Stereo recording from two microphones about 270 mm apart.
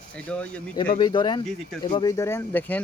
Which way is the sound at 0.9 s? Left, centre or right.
Centre.